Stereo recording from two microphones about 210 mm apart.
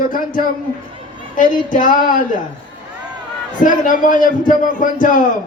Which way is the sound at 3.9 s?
40° left (ahead or behind).